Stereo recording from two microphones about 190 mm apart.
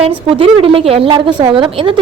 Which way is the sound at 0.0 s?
30° right (ahead or behind).